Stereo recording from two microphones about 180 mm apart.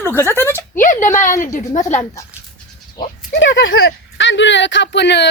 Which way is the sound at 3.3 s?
85° left.